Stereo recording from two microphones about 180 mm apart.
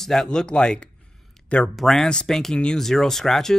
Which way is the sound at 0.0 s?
Centre (ahead or behind).